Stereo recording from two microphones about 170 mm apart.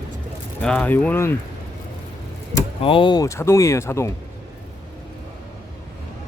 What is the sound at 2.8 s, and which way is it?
Speech, 30° left (ahead or behind).